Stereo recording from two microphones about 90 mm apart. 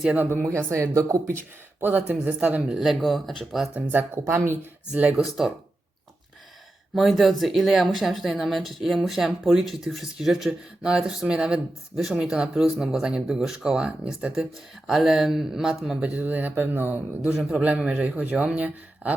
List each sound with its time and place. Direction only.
0.2 s speech: 25° right (ahead or behind)
1.8 s speech: 20° right (ahead or behind); by 3.7 s centre (ahead or behind)
3.8 s speech: 20° right (ahead or behind)
4.9 s speech: 15° right (ahead or behind)
6.9 s speech: centre (ahead or behind); by 19.1 s 15° right (ahead or behind)